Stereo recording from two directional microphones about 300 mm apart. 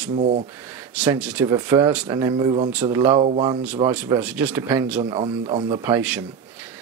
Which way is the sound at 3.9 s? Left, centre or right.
Centre.